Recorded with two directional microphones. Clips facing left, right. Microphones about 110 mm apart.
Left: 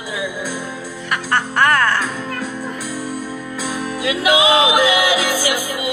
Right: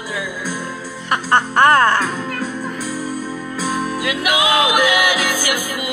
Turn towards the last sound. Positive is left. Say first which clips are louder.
# left 2 dB
turn(degrees=25)  # may be behind; listen again after turning